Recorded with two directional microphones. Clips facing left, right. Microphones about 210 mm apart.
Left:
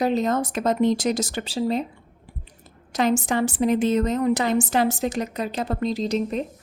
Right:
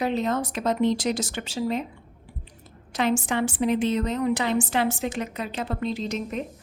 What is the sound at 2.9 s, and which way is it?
A woman's voice, 40° left (ahead or behind).